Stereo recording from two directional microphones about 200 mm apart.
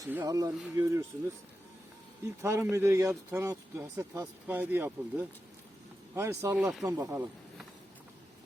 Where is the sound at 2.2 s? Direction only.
15° right (ahead or behind).